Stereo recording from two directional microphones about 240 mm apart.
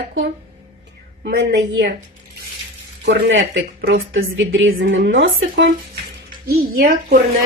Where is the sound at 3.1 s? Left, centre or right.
Right.